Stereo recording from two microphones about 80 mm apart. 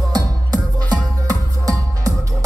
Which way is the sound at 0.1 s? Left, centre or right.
Right.